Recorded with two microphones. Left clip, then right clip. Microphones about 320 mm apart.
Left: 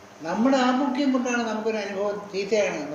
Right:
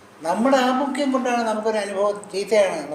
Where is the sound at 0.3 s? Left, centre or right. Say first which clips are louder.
Right 4 dB; right.